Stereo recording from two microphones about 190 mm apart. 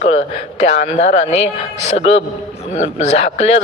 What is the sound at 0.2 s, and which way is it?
A man's voice, 35° left (ahead or behind).